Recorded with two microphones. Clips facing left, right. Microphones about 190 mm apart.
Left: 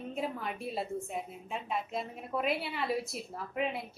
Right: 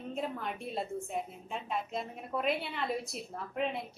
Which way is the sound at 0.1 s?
5° left (ahead or behind).